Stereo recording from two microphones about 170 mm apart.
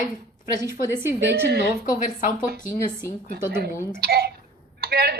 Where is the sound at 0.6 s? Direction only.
20° right (ahead or behind).